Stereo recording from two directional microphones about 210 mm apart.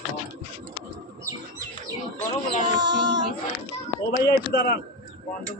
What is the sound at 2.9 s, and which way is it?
Child singing, 60° right (ahead or behind).